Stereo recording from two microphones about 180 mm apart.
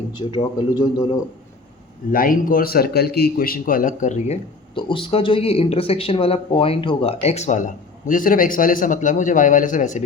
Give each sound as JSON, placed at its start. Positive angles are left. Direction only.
{"t": 0.1, "sound": "a man's voice", "side_deg": 25}
{"t": 2.1, "sound": "a man's voice", "side_deg": 50}
{"t": 4.7, "sound": "speech", "side_deg": 25}